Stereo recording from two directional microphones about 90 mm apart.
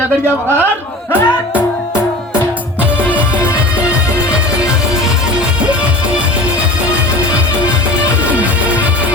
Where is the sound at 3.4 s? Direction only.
30° left (ahead or behind).